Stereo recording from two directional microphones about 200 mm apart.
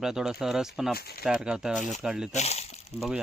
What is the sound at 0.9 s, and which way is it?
Speech, 50° left (ahead or behind).